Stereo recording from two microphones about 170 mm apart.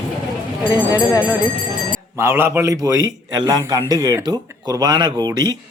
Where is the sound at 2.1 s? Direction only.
15° right (ahead or behind).